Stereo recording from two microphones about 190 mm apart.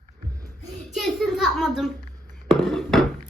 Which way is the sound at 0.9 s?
Centre (ahead or behind).